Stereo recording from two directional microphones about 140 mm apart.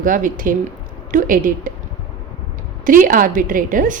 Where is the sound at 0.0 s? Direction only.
75° right (ahead or behind).